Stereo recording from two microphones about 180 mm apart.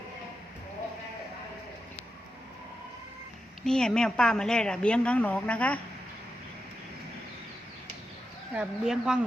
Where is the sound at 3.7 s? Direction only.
5° left (ahead or behind).